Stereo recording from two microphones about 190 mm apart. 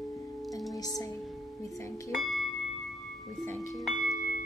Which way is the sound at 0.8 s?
20° left (ahead or behind).